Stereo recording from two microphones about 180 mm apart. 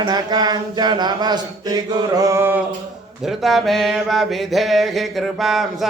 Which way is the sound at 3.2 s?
Centre (ahead or behind).